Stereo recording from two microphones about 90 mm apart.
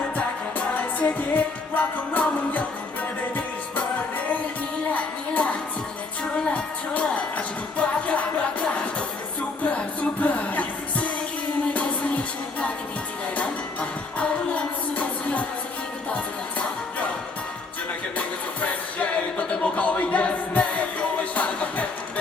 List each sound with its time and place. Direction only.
0.7 s music: 15° left (ahead or behind)
4.9 s music: 15° left (ahead or behind)
14.2 s music: 15° left (ahead or behind)
18.6 s music: 15° left (ahead or behind)